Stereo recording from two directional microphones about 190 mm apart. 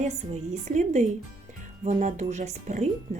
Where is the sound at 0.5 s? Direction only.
35° right (ahead or behind).